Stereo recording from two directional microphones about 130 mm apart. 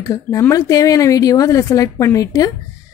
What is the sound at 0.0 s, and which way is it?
Speech, 25° left (ahead or behind).